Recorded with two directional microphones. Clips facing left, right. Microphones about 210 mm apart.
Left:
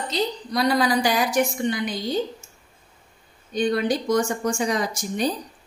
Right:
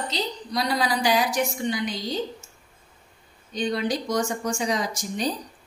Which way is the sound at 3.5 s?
55° left (ahead or behind).